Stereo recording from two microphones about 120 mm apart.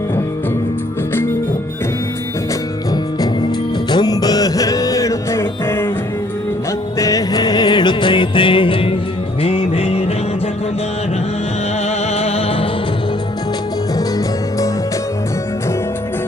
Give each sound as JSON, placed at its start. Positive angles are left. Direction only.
{"t": 3.9, "sound": "music", "side_deg": 35}
{"t": 7.0, "sound": "music", "side_deg": 30}